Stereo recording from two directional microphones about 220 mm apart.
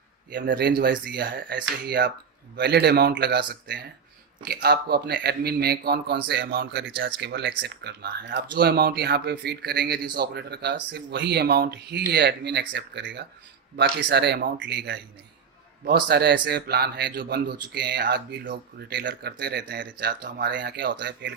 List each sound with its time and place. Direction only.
0.3 s speech: 50° right (ahead or behind)